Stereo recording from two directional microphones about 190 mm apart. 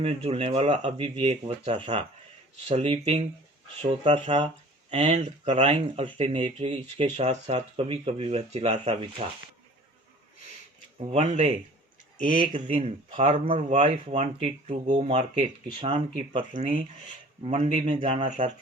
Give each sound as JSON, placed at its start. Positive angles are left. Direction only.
{"t": 0.0, "sound": "speech", "side_deg": -30}
{"t": 11.1, "sound": "speech", "side_deg": -35}
{"t": 12.5, "sound": "a man's voice", "side_deg": -40}
{"t": 18.3, "sound": "speech", "side_deg": -40}